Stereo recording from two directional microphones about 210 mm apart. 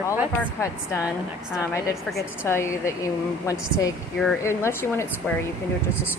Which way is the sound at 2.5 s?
10° left (ahead or behind).